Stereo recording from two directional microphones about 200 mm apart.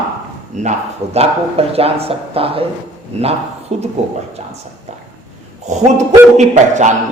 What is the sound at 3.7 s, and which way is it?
Speech, 35° right (ahead or behind).